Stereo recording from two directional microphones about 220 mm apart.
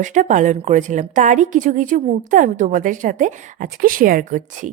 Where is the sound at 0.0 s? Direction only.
35° right (ahead or behind).